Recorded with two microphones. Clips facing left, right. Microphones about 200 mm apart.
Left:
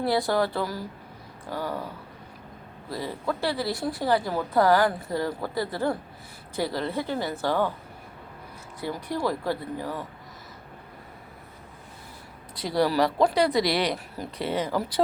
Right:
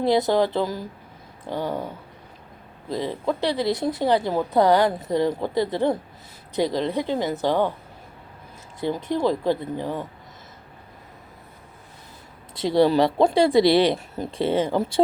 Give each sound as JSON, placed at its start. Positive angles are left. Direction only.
{"t": 0.0, "sound": "speech", "side_deg": -20}
{"t": 2.9, "sound": "speech", "side_deg": -20}
{"t": 8.8, "sound": "speech", "side_deg": -25}
{"t": 12.5, "sound": "speech", "side_deg": -25}